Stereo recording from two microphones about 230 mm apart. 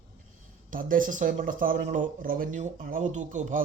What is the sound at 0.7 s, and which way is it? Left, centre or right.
Speech, right.